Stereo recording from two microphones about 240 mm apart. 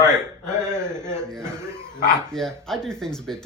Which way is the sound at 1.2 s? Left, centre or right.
Centre.